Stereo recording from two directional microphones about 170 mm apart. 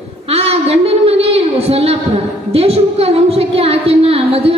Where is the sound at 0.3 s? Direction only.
35° right (ahead or behind).